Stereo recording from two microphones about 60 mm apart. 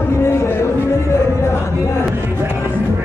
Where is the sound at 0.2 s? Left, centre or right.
Left.